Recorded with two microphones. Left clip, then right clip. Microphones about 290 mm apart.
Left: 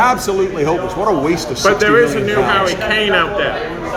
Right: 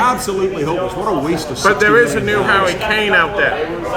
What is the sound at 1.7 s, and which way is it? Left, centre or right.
A man's voice, centre.